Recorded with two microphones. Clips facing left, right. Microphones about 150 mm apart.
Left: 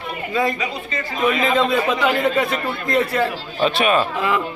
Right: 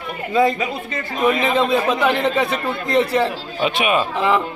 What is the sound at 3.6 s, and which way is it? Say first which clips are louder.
Speech: left 1 dB; 10° right (ahead or behind).